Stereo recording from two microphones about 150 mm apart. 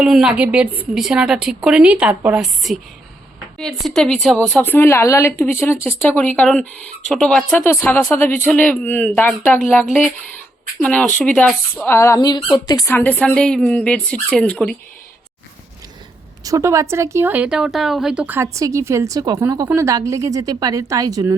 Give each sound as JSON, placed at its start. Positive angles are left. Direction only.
{"t": 0.0, "sound": "a woman's voice", "side_deg": -5}
{"t": 4.6, "sound": "speech", "side_deg": 15}
{"t": 10.8, "sound": "speech", "side_deg": 5}
{"t": 12.9, "sound": "speech", "side_deg": 10}
{"t": 16.4, "sound": "a woman's voice", "side_deg": -20}